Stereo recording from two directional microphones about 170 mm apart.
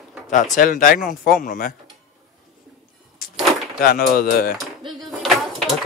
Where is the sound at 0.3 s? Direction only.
55° left (ahead or behind).